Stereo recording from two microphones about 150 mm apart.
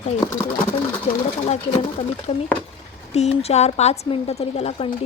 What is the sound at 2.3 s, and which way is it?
A woman's voice, 45° left (ahead or behind).